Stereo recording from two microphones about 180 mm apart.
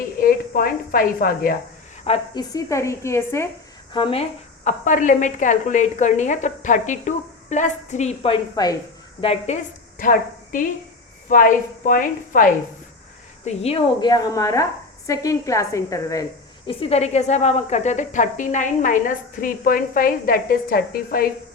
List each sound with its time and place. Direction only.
0.0 s a woman's voice: 55° left (ahead or behind)
2.0 s a woman's voice: 30° left (ahead or behind)
3.9 s a woman's voice: 30° left (ahead or behind)
10.0 s a woman's voice: 50° left (ahead or behind)
13.4 s a woman's voice: 35° left (ahead or behind); by 16.2 s 15° left (ahead or behind)
16.6 s a woman's voice: 35° left (ahead or behind); by 21.2 s 55° left (ahead or behind)